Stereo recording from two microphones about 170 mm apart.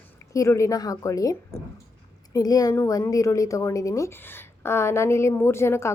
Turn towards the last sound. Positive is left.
turn(degrees=15)  # may be behind; listen again after turning